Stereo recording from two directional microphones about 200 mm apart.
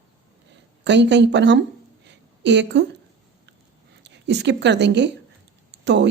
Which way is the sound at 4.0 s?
60° right (ahead or behind).